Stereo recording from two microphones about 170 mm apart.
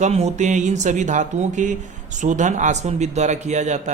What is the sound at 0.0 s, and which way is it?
Speech, 40° right (ahead or behind).